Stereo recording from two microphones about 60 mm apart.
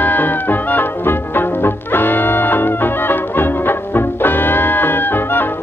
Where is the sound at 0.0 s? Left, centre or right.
Left.